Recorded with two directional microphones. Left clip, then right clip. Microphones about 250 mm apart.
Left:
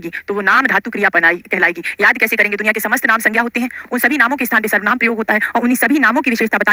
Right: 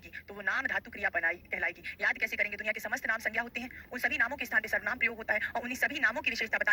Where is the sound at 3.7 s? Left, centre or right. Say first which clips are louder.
Left 17 dB; left.